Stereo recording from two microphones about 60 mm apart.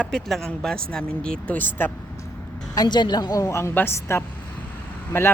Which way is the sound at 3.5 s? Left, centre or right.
Left.